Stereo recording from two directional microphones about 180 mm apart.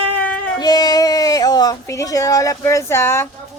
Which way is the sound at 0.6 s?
20° left (ahead or behind).